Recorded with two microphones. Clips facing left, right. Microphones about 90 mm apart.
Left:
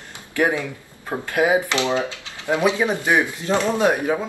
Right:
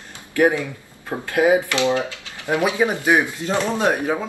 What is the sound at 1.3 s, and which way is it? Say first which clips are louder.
Speech: right 2 dB; 20° left (ahead or behind).